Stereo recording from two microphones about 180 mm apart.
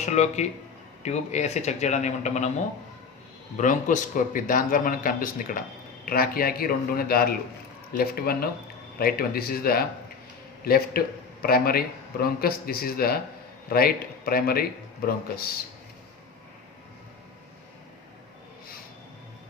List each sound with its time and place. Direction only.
0.0 s speech: 40° left (ahead or behind)
3.6 s a man's voice: 45° left (ahead or behind)